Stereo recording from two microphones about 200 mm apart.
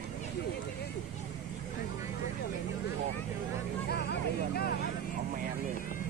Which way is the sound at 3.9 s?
55° left (ahead or behind).